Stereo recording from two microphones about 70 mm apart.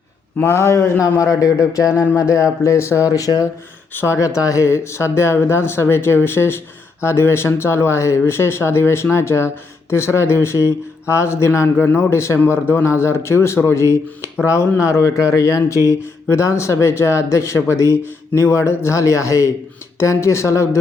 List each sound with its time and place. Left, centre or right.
0.4 s speech: left
3.1 s speech: left
4.0 s speech: left
11.9 s speech: left